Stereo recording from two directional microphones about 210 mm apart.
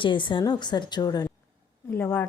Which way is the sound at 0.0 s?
25° left (ahead or behind).